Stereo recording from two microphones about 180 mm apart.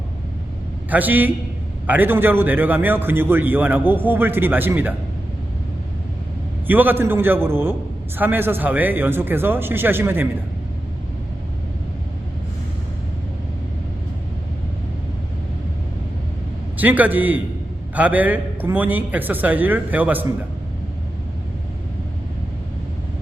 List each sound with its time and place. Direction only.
0.9 s a man's voice: 10° right (ahead or behind)
6.7 s a man's voice: 10° right (ahead or behind)
16.7 s a man's voice: 10° right (ahead or behind)